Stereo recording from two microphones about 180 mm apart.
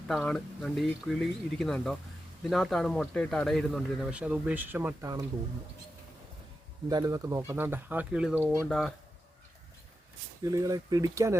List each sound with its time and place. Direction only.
0.1 s speech: 5° left (ahead or behind); by 4.9 s 10° right (ahead or behind)
6.8 s speech: 20° right (ahead or behind)
10.4 s speech: 20° right (ahead or behind)